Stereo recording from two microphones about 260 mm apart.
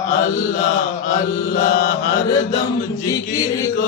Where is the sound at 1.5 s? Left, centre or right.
Left.